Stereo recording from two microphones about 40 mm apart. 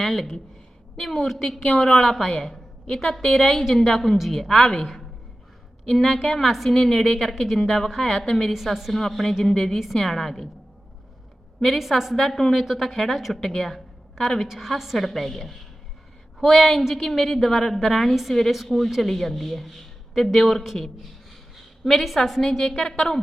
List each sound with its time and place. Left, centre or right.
0.0 s a woman's voice: centre
1.5 s a woman's voice: left; by 6.7 s centre
6.7 s a woman's voice: centre
8.5 s a woman's voice: centre
8.9 s a woman's voice: centre
9.7 s a woman's voice: centre
11.6 s speech: centre
12.1 s a woman's voice: centre
13.4 s speech: centre
14.4 s a woman's voice: centre
18.1 s speech: centre
21.8 s a woman's voice: centre